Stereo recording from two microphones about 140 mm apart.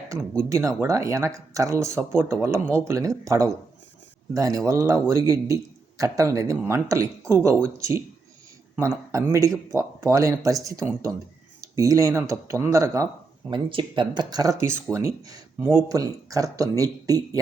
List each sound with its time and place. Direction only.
0.4 s speech: 20° right (ahead or behind)
13.5 s speech: 35° right (ahead or behind)
15.5 s speech: 10° right (ahead or behind)
15.9 s speech: 25° right (ahead or behind)